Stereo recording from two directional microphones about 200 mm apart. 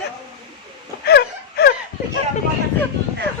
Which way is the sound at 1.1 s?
55° left (ahead or behind).